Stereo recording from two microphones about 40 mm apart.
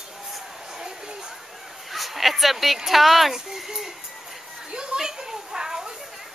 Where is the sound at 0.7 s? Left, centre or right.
Centre.